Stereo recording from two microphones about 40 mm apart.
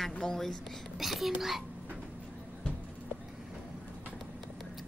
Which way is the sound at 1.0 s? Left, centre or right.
Centre.